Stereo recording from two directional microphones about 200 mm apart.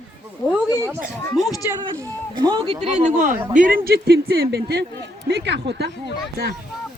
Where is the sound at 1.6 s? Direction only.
15° right (ahead or behind).